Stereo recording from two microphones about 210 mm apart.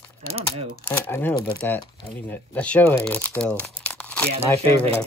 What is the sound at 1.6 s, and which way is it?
Speech, 5° left (ahead or behind).